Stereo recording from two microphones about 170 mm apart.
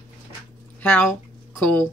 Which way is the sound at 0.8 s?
10° left (ahead or behind).